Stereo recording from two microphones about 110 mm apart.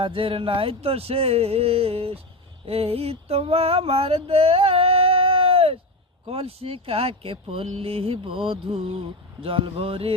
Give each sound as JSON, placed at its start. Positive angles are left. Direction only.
{"t": 0.0, "sound": "speech", "side_deg": -55}
{"t": 2.6, "sound": "a sound", "side_deg": -60}
{"t": 6.2, "sound": "speech", "side_deg": -60}